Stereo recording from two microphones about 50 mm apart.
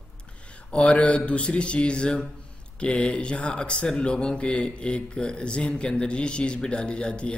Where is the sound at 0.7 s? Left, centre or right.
Left.